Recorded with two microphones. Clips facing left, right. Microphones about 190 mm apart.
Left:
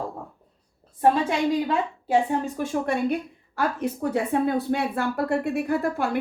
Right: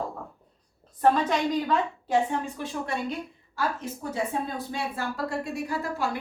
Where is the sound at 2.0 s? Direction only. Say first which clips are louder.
Left 4 dB; 45° left (ahead or behind).